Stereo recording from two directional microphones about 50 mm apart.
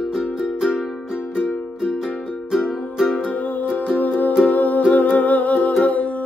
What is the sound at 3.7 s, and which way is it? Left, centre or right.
Music, left.